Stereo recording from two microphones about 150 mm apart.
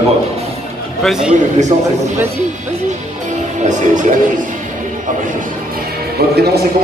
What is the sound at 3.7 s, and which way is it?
Music, 55° right (ahead or behind).